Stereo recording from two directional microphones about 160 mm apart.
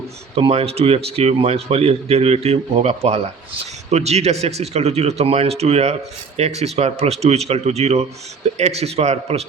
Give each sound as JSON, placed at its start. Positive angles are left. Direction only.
{"t": 0.3, "sound": "speech", "side_deg": -35}